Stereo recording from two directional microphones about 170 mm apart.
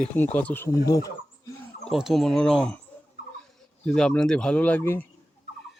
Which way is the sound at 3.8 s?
5° left (ahead or behind).